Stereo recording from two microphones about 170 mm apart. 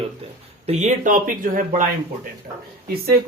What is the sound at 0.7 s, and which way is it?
Speech, 45° right (ahead or behind).